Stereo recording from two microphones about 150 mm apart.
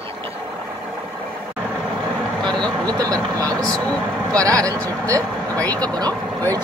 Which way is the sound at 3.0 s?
25° right (ahead or behind).